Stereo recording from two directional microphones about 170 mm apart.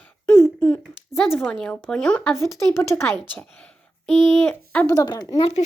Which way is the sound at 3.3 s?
5° left (ahead or behind).